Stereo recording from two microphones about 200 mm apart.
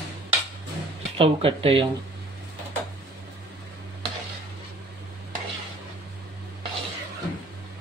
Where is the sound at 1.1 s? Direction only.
30° right (ahead or behind).